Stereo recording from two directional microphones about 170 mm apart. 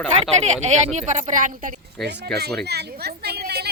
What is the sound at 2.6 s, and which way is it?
Speech, 75° right (ahead or behind).